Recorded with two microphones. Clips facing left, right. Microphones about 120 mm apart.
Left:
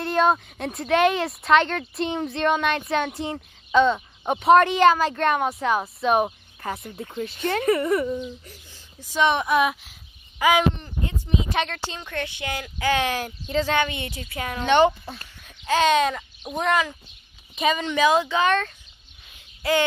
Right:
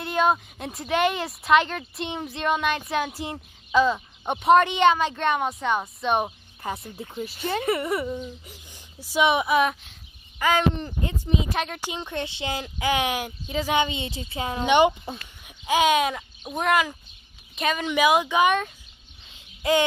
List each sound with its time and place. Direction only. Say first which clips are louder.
0.0 s speech: left 2 dB; centre (ahead or behind)
10.4 s a sound: left 2 dB; 10° left (ahead or behind)
11.5 s speech: left 2 dB; 5° right (ahead or behind)
11.9 s speech: right 1 dB; 20° right (ahead or behind)
12.7 s speech: left 2 dB; 15° right (ahead or behind)
17.8 s speech: right 2 dB; 10° right (ahead or behind)
19.2 s bird: right 1 dB; 20° right (ahead or behind)